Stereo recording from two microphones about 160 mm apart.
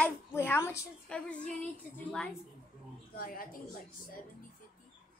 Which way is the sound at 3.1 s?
65° left (ahead or behind).